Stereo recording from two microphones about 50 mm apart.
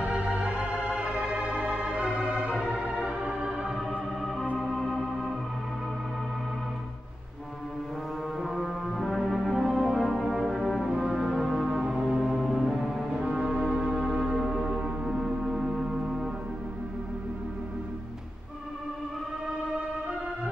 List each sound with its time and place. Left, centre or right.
0.0 s organ: right
2.5 s music: right
3.0 s music: centre
4.6 s organ: centre
8.4 s music: centre
9.2 s brass instrument: centre
11.0 s music: centre
13.1 s music: centre